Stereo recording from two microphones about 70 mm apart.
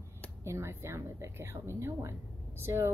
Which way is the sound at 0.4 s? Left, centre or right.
Right.